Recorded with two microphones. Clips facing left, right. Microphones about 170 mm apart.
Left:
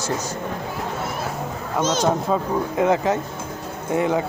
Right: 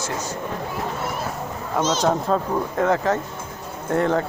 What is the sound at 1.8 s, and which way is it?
Speech, 55° left (ahead or behind).